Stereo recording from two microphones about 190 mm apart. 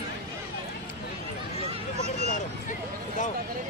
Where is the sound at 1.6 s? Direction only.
35° right (ahead or behind).